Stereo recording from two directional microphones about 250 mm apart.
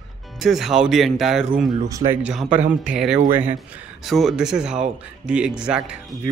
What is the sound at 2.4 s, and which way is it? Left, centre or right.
Speech, right.